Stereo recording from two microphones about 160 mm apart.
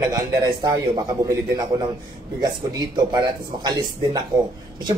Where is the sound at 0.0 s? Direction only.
25° right (ahead or behind).